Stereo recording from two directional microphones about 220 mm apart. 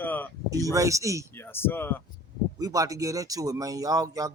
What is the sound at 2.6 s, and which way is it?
Speech, 15° right (ahead or behind).